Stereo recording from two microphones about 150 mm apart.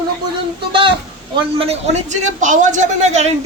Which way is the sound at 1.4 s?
40° right (ahead or behind).